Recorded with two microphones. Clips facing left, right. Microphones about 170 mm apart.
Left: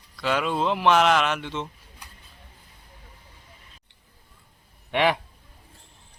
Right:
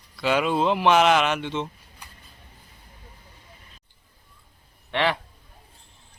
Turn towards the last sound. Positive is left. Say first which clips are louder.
# left 2 dB
turn(degrees=15)  # may be behind; listen again after turning